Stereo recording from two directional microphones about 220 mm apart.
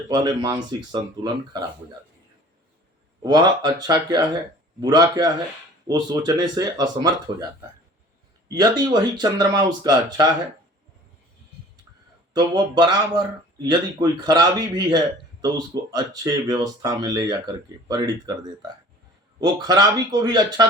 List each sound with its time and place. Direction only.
0.1 s speech: 20° right (ahead or behind)
3.2 s speech: 20° right (ahead or behind)
8.4 s speech: 20° right (ahead or behind)
12.3 s speech: 20° right (ahead or behind)
19.4 s speech: 20° right (ahead or behind)